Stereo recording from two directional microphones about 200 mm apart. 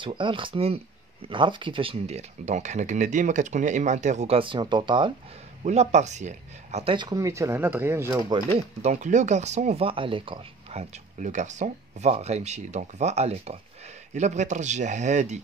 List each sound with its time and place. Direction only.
0.0 s speech: 25° right (ahead or behind)
5.6 s speech: 35° right (ahead or behind); by 8.2 s 10° right (ahead or behind)
8.2 s speech: 30° right (ahead or behind)